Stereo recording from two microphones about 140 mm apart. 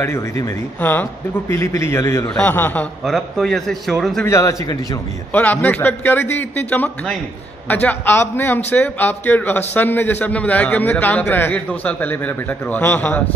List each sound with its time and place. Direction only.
0.0 s a man's voice: 20° left (ahead or behind); by 4.3 s centre (ahead or behind)
4.3 s a man's voice: 25° left (ahead or behind)
5.3 s a man's voice: 10° left (ahead or behind)